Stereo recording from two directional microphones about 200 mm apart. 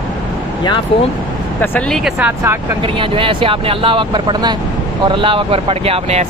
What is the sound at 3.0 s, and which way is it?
Speech, 25° right (ahead or behind).